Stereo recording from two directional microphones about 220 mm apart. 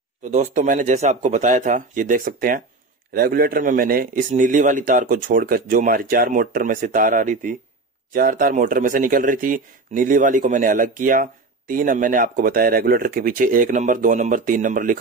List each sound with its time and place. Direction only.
0.2 s speech: 35° right (ahead or behind)